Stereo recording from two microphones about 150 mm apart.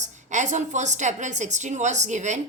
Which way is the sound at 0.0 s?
55° right (ahead or behind).